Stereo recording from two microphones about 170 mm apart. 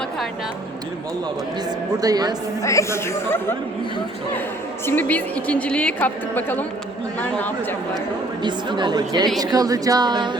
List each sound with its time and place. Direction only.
2.0 s speech: 20° right (ahead or behind)
2.6 s a woman's voice: 20° left (ahead or behind)
4.9 s a woman's voice: 10° left (ahead or behind)
8.4 s speech: 25° right (ahead or behind)